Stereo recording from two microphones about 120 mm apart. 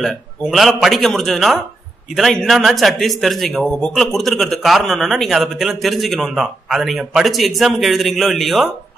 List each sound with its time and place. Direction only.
0.0 s a man's voice: centre (ahead or behind)